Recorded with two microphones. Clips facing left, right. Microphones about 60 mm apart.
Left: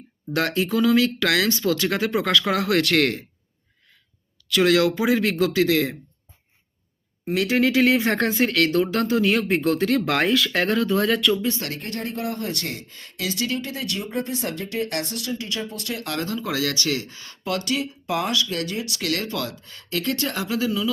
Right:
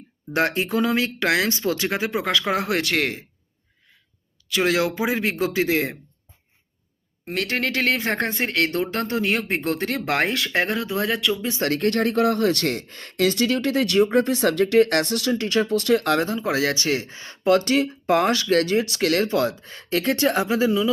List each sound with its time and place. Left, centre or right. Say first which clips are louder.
0.3 s speech: even; right
2.8 s speech: left 3 dB; centre
4.4 s speech: left 3 dB; centre
7.3 s speech: left 4 dB; centre
11.7 s speech: right 9 dB; right
16.1 s speech: right 4 dB; right